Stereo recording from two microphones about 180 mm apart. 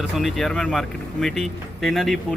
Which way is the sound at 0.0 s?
Centre (ahead or behind).